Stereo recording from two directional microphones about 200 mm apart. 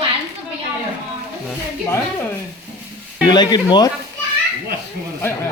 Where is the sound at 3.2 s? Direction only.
20° left (ahead or behind).